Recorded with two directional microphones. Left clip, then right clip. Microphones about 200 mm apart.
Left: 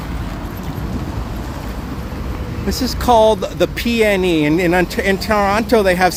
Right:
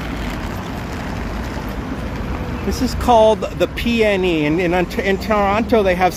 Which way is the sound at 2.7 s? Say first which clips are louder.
Left 1 dB; 20° left (ahead or behind).